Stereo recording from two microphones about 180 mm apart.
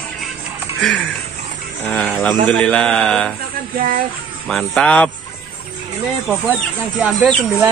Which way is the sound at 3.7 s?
50° right (ahead or behind).